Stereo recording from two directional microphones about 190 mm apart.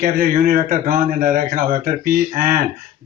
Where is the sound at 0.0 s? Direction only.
45° right (ahead or behind).